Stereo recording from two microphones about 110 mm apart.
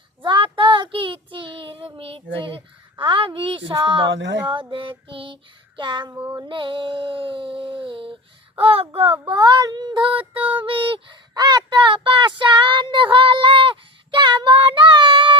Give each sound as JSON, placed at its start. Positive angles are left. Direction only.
{"t": 0.2, "sound": "child singing", "side_deg": -50}
{"t": 3.0, "sound": "a woman's voice", "side_deg": -50}
{"t": 4.7, "sound": "child singing", "side_deg": -50}
{"t": 6.1, "sound": "female singing", "side_deg": -25}
{"t": 6.4, "sound": "a sound", "side_deg": -50}
{"t": 8.5, "sound": "speech", "side_deg": -60}
{"t": 9.2, "sound": "child singing", "side_deg": -45}
{"t": 11.3, "sound": "a sound", "side_deg": -40}